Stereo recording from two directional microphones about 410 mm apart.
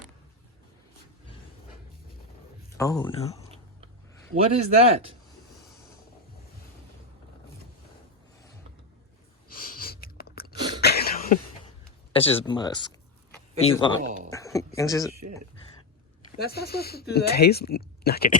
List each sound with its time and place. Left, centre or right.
2.7 s speech: centre
4.5 s speech: centre
9.5 s a sound: left
12.1 s speech: centre
14.0 s speech: centre
14.3 s a sound: centre
14.8 s speech: centre
16.4 s speech: left